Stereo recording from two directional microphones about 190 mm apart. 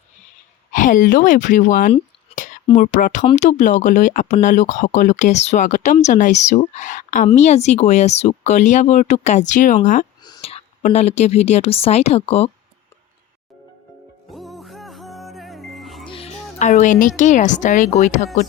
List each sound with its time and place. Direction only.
0.7 s speech: 45° left (ahead or behind)
2.3 s whispering: 40° left (ahead or behind)
2.7 s speech: 45° left (ahead or behind)
10.2 s whispering: 25° left (ahead or behind)
10.8 s speech: 35° left (ahead or behind)
14.3 s music: centre (ahead or behind)
16.0 s speech: 30° left (ahead or behind)